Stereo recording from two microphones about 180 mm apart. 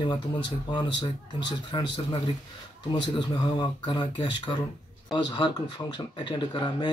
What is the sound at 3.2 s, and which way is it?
Speech, 25° left (ahead or behind).